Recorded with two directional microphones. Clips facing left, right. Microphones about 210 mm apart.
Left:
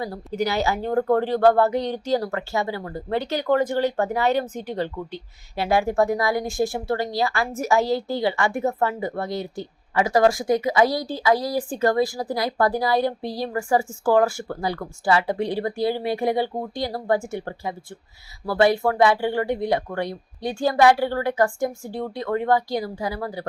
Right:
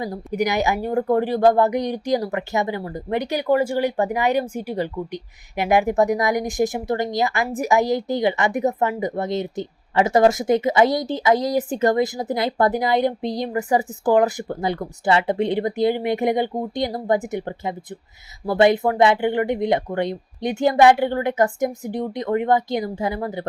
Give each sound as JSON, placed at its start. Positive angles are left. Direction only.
{"t": 0.0, "sound": "a woman's voice", "side_deg": -15}